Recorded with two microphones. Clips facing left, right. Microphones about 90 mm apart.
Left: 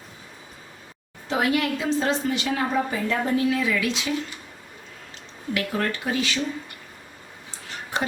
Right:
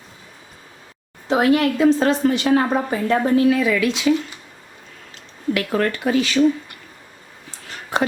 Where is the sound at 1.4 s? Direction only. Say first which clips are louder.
Right 7 dB; 45° right (ahead or behind); by 3.9 s 60° right (ahead or behind).